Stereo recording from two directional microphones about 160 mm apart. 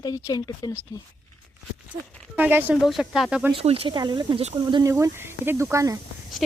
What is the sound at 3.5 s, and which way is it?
Speech, 35° right (ahead or behind).